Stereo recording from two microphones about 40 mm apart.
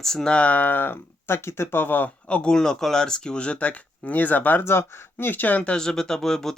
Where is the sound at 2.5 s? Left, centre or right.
Centre; by 4.6 s left.